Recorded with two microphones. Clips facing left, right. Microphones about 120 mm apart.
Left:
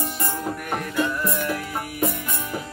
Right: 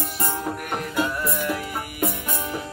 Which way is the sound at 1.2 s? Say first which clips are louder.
Even; 5° right (ahead or behind).